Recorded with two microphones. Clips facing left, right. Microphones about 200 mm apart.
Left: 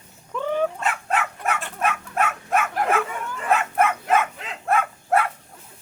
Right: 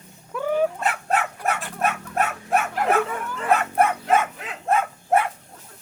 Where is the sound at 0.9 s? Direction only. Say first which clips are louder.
Right 1 dB; 40° right (ahead or behind).